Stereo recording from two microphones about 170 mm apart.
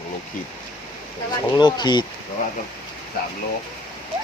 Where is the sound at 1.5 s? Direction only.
25° left (ahead or behind).